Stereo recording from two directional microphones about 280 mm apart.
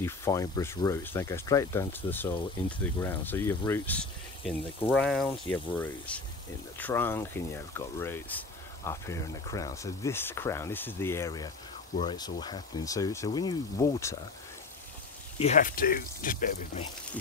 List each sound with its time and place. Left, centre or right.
0.0 s speech: centre
15.3 s speech: left